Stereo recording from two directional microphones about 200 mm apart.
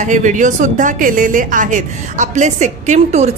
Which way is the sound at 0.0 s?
40° right (ahead or behind).